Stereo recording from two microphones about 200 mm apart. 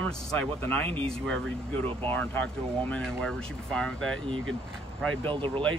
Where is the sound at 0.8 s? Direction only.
30° right (ahead or behind).